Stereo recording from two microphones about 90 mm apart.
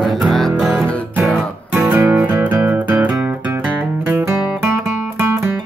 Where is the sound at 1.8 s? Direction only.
20° right (ahead or behind).